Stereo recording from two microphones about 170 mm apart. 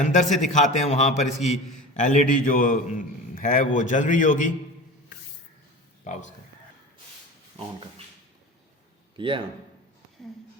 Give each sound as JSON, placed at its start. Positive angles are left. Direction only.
{"t": 0.0, "sound": "a man's voice", "side_deg": 45}
{"t": 6.1, "sound": "a man's voice", "side_deg": 45}
{"t": 9.1, "sound": "a man's voice", "side_deg": -30}